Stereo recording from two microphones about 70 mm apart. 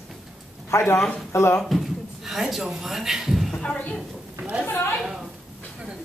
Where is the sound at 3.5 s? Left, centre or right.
Centre.